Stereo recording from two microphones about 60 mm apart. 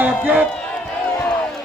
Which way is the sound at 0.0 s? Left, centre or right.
Right.